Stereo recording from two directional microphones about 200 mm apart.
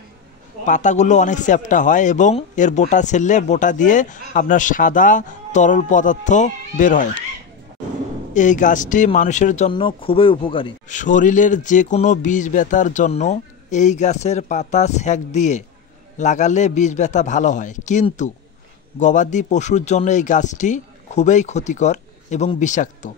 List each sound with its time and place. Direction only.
0.7 s speech: 40° left (ahead or behind)
8.4 s speech: 40° left (ahead or behind)
9.7 s speech: 25° left (ahead or behind)
10.9 s speech: 40° left (ahead or behind)